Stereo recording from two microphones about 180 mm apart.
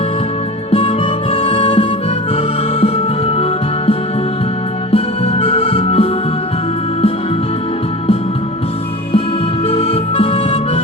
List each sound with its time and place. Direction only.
0.7 s music: 30° left (ahead or behind)
4.9 s music: 35° left (ahead or behind)
9.6 s harmonica: 35° left (ahead or behind)